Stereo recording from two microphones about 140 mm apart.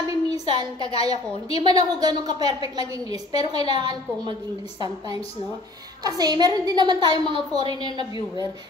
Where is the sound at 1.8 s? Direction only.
30° right (ahead or behind).